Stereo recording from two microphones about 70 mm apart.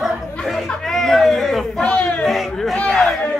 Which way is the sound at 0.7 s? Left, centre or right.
Centre.